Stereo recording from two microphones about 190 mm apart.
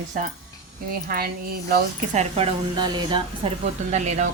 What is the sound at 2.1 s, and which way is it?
Speech, 30° right (ahead or behind).